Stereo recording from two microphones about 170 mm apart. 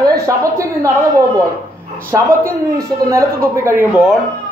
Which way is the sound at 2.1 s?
15° right (ahead or behind).